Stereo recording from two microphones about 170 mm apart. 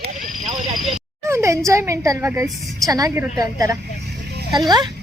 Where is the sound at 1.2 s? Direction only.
15° right (ahead or behind).